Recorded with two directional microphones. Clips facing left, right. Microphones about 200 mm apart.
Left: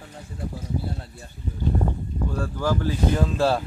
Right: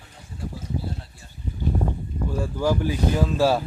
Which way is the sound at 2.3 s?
10° right (ahead or behind).